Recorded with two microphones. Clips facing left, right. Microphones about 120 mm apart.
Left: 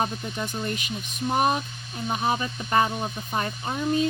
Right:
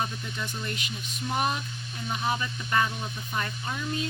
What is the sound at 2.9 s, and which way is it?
Speech, 45° left (ahead or behind).